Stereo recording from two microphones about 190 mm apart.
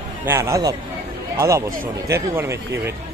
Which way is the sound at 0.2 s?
15° right (ahead or behind).